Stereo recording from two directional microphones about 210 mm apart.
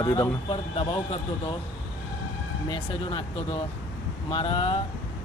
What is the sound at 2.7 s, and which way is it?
Speech, 25° left (ahead or behind).